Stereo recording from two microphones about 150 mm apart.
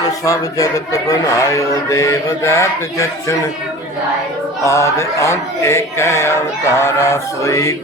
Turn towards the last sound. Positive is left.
turn(degrees=20)  # may be behind; listen again after turning